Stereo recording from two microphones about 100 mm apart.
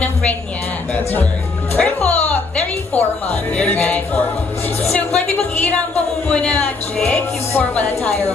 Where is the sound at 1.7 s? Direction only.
15° left (ahead or behind).